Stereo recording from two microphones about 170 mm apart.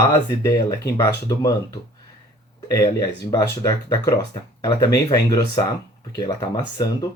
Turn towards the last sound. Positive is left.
turn(degrees=25)  # may be behind; listen again after turning